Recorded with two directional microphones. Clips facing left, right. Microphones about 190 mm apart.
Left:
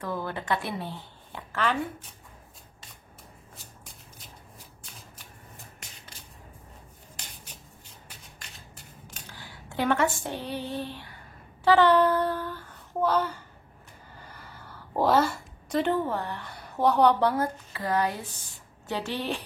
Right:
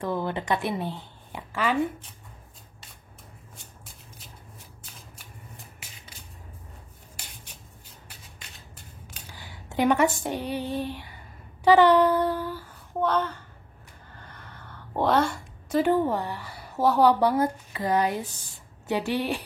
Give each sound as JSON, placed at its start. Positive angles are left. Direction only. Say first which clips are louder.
{"t": 0.0, "sound": "a woman's voice", "louder": "right 4 dB", "side_deg": -25}
{"t": 5.8, "sound": "shuffle", "louder": "even", "side_deg": -5}
{"t": 9.3, "sound": "a sound", "louder": "right 3 dB", "side_deg": -15}
{"t": 10.2, "sound": "a woman's voice", "louder": "right 4 dB", "side_deg": -15}
{"t": 13.0, "sound": "a woman's voice", "louder": "even", "side_deg": 10}
{"t": 14.1, "sound": "a sound", "louder": "even", "side_deg": 10}
{"t": 15.9, "sound": "a woman's voice", "louder": "right 4 dB", "side_deg": -15}